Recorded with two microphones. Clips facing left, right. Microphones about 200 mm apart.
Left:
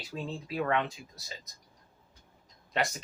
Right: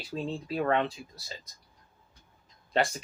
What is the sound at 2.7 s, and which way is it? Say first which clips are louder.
Speech: right 4 dB; 35° right (ahead or behind).